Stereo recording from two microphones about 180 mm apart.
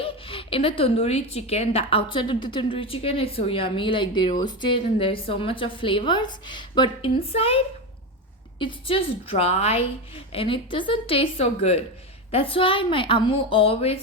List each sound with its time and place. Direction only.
0.0 s a woman's voice: 30° left (ahead or behind)